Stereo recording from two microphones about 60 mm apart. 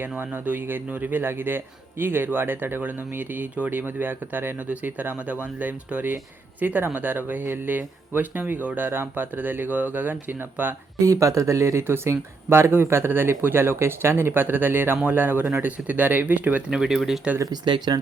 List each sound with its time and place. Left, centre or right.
0.3 s speech: right
11.0 s speech: right
16.7 s speech: centre
17.3 s speech: right